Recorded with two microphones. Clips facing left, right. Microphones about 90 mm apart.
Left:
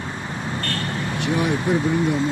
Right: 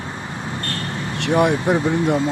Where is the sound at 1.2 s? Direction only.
70° right (ahead or behind).